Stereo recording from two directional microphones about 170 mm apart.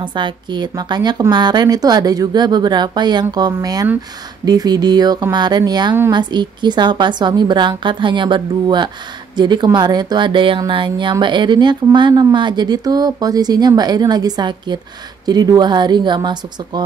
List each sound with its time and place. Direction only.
0.0 s speech: 25° right (ahead or behind)